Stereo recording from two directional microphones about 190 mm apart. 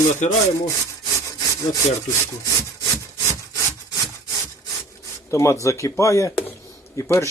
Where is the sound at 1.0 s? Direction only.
20° left (ahead or behind).